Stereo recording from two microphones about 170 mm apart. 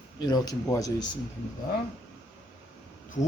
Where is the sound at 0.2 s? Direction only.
25° left (ahead or behind).